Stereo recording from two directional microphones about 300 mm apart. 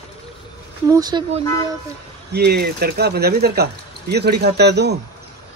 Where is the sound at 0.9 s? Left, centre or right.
Centre.